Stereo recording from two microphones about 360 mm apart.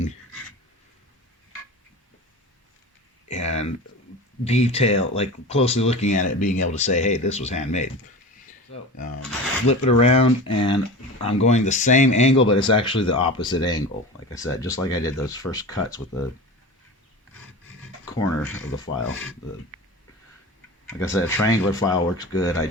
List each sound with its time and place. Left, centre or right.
3.2 s a sound: centre
4.4 s speech: centre
18.2 s speech: centre
20.8 s speech: centre